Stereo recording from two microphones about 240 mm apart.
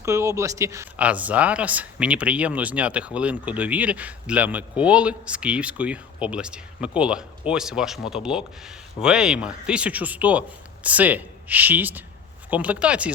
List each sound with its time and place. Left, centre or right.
0.0 s a man's voice: centre